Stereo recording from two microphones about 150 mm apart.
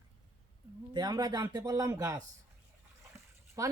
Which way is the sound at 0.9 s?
25° right (ahead or behind).